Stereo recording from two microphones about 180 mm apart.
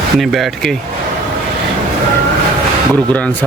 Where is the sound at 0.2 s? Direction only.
Centre (ahead or behind).